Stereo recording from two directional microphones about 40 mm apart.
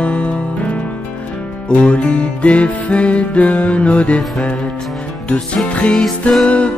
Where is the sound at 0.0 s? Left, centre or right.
Left.